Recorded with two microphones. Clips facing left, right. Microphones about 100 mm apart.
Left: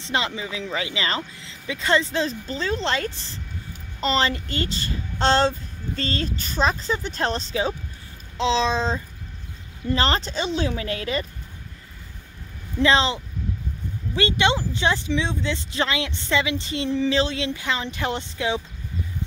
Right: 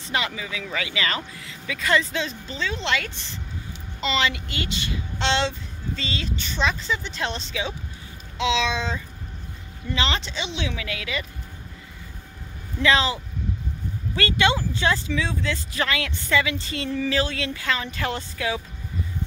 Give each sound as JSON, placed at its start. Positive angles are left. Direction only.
{"t": 0.0, "sound": "speech", "side_deg": 25}
{"t": 12.8, "sound": "speech", "side_deg": 30}